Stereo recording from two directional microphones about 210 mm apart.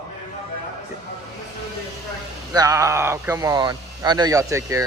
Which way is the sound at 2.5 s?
15° right (ahead or behind).